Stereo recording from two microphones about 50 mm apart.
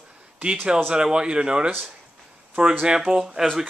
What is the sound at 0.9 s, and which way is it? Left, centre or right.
Speech, centre.